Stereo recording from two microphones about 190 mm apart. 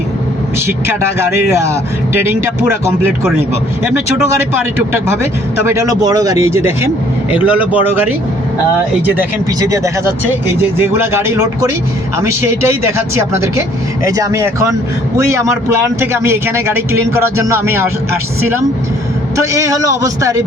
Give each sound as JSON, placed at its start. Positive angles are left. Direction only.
{"t": 2.3, "sound": "speech", "side_deg": -10}
{"t": 5.6, "sound": "speech", "side_deg": -15}
{"t": 9.0, "sound": "speech", "side_deg": -15}
{"t": 19.4, "sound": "speech", "side_deg": -15}